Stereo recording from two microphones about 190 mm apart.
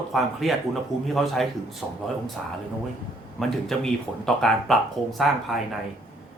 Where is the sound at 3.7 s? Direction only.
Centre (ahead or behind).